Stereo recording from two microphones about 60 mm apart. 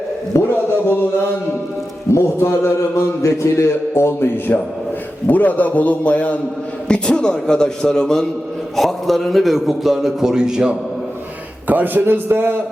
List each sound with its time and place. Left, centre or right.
0.3 s a man's voice: left
2.1 s a man's voice: left
5.3 s a man's voice: left; by 10.8 s centre
11.7 s a man's voice: right